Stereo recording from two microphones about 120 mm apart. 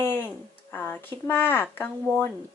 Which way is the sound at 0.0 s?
20° left (ahead or behind).